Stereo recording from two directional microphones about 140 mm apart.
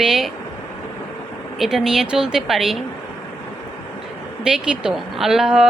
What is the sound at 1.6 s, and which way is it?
Speech, centre (ahead or behind).